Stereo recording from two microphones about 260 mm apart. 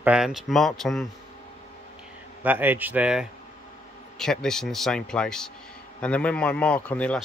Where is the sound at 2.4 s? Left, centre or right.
Centre.